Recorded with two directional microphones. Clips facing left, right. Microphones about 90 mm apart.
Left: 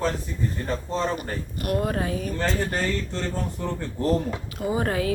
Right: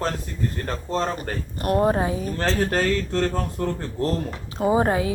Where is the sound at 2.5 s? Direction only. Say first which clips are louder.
Right 6 dB; 75° right (ahead or behind); by 3.6 s 55° right (ahead or behind).